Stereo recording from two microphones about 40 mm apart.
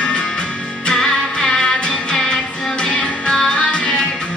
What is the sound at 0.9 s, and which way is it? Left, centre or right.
Music, centre.